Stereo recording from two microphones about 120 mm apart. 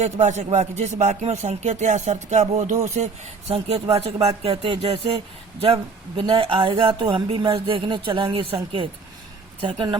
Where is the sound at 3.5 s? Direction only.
60° right (ahead or behind).